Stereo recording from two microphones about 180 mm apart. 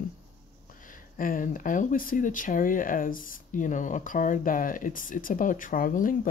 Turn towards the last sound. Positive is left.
turn(degrees=50)  # may be behind; listen again after turning